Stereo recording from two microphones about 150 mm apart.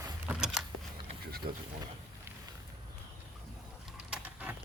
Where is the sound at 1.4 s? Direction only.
90° right.